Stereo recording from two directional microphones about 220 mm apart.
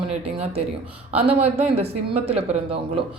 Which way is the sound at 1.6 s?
25° right (ahead or behind).